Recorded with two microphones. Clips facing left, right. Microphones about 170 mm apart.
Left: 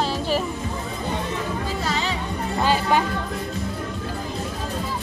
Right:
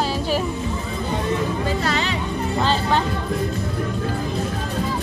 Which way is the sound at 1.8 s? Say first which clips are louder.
Right 2 dB; 70° right (ahead or behind).